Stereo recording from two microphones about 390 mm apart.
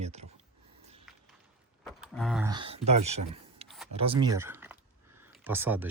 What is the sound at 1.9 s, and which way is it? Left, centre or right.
Speech, centre.